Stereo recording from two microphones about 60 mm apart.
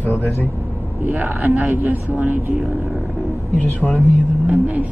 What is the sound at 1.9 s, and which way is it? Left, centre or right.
Speech, right.